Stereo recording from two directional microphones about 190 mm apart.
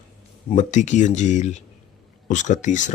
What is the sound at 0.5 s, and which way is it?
Speech, 40° left (ahead or behind).